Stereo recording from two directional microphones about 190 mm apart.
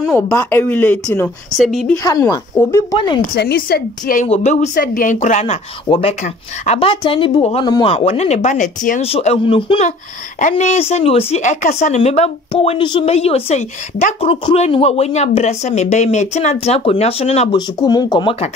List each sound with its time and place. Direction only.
0.1 s a woman's voice: 10° left (ahead or behind)
2.0 s speech: 20° left (ahead or behind)
3.3 s a woman's voice: 55° left (ahead or behind)
4.3 s speech: 35° left (ahead or behind)
4.7 s speech: 50° left (ahead or behind); by 17.6 s 30° left (ahead or behind)
17.6 s speech: 20° left (ahead or behind)